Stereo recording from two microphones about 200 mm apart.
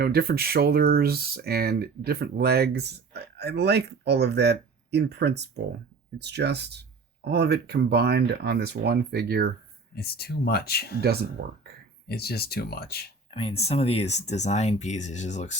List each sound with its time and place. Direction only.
0.0 s speech: 50° right (ahead or behind)
9.9 s speech: 50° left (ahead or behind)
11.0 s speech: 50° right (ahead or behind)
12.0 s speech: 50° left (ahead or behind)
13.3 s speech: 30° left (ahead or behind)